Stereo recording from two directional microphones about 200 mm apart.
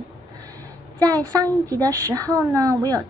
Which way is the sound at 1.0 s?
20° right (ahead or behind).